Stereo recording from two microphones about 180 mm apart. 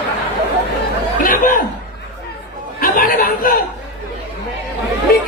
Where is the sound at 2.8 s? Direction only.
50° left (ahead or behind).